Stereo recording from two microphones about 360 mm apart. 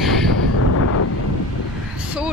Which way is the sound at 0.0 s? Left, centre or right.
Centre.